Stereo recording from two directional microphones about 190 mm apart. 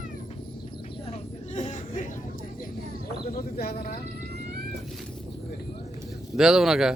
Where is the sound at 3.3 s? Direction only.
55° left (ahead or behind).